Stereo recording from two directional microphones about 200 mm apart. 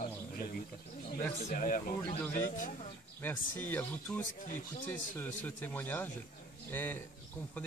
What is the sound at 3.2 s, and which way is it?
Speech, 10° left (ahead or behind).